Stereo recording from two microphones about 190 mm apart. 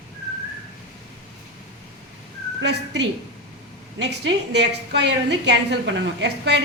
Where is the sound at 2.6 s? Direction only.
65° right (ahead or behind).